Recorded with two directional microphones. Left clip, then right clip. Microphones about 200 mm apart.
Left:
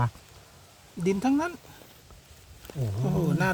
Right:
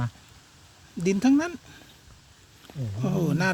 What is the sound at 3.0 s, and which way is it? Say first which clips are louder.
Speech: right 1 dB; 10° right (ahead or behind).